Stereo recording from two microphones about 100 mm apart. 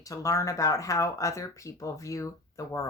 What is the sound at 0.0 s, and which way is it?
Speech, 35° left (ahead or behind).